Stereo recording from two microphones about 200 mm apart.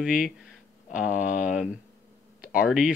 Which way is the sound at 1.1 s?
40° left (ahead or behind).